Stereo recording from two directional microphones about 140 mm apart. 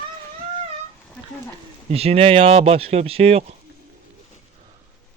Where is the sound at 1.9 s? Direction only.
45° right (ahead or behind).